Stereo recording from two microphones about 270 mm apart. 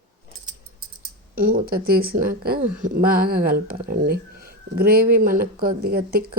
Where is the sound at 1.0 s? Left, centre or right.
Right.